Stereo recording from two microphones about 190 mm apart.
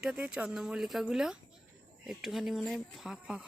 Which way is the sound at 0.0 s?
5° right (ahead or behind).